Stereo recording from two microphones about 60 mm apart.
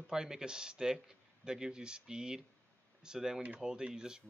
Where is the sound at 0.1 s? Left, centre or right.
Centre.